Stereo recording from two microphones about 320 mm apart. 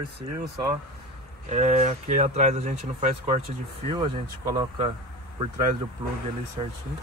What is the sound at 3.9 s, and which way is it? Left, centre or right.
Speech, centre.